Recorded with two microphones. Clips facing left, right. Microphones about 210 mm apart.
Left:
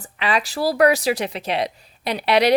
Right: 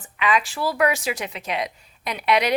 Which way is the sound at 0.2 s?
35° left (ahead or behind).